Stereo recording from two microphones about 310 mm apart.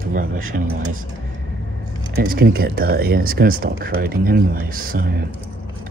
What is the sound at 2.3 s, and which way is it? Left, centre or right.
Speech, right.